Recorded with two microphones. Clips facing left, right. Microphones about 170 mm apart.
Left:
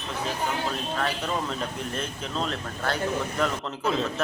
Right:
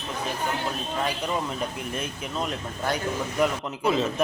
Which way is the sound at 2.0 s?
10° right (ahead or behind).